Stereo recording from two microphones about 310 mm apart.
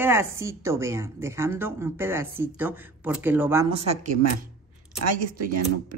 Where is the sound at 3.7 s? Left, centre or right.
Centre.